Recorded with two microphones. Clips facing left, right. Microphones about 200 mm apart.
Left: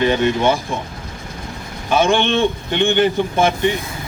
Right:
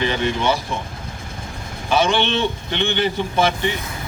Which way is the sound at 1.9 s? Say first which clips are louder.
Left 3 dB; 50° left (ahead or behind).